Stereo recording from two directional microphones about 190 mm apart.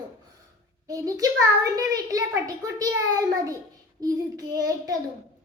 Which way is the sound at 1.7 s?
20° right (ahead or behind).